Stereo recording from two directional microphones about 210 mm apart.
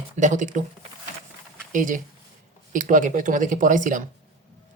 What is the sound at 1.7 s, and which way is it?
Speech, 40° right (ahead or behind).